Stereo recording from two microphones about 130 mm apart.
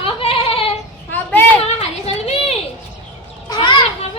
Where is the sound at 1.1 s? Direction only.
15° left (ahead or behind).